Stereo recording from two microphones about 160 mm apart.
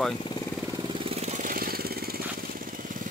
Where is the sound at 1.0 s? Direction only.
40° right (ahead or behind); by 2.2 s 70° right (ahead or behind).